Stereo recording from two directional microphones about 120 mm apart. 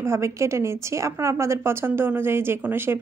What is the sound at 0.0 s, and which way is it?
A woman's voice, 25° right (ahead or behind).